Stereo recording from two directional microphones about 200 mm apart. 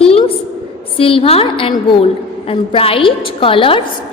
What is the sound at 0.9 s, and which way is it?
A woman's voice, 25° left (ahead or behind).